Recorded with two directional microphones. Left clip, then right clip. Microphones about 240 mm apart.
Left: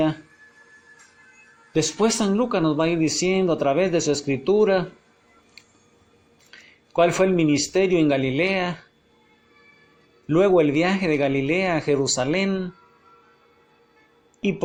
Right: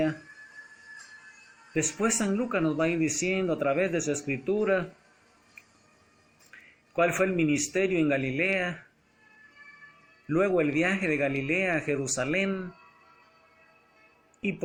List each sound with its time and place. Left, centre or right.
2.0 s speech: centre
6.9 s speech: centre
10.2 s speech: centre